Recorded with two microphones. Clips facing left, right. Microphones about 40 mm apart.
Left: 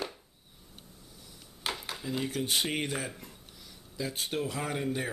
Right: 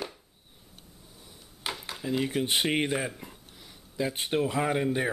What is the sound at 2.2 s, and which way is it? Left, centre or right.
Speech, right.